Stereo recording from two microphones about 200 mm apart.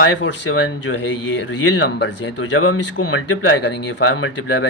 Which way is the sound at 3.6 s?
60° left (ahead or behind).